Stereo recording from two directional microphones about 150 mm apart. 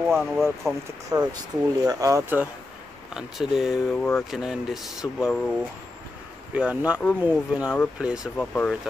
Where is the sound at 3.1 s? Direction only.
5° right (ahead or behind).